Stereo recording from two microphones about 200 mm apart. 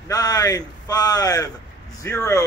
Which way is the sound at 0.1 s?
20° left (ahead or behind).